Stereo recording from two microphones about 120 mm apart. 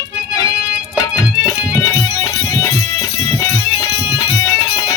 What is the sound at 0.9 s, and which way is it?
Music, 30° left (ahead or behind).